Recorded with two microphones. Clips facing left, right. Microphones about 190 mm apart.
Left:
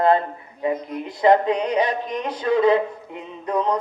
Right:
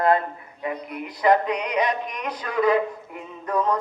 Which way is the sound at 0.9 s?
25° left (ahead or behind).